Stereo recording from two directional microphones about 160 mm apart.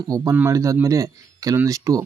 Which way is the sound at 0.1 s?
15° right (ahead or behind).